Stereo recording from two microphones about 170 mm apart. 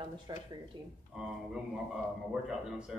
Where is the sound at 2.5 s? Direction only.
5° right (ahead or behind).